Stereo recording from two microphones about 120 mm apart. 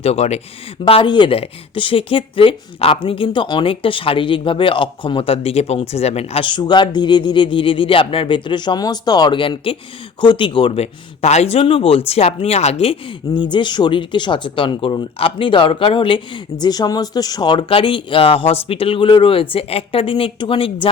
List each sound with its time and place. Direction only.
0.0 s speech: 60° left (ahead or behind)
0.9 s speech: 45° left (ahead or behind)
6.4 s a man's voice: 40° left (ahead or behind)